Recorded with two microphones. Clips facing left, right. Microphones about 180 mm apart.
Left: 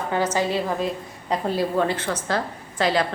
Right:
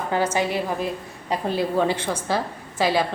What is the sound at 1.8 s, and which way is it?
A woman's voice, 10° right (ahead or behind).